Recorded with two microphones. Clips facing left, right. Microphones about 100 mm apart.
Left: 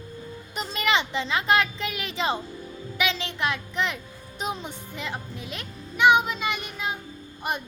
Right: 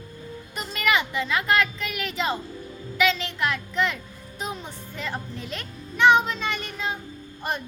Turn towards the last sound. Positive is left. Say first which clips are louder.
# even
turn(degrees=15)  # may be behind; listen again after turning